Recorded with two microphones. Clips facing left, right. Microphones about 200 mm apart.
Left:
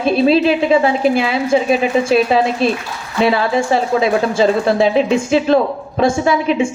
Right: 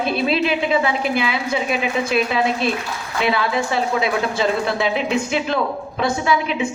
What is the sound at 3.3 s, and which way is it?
A woman's voice, 45° left (ahead or behind).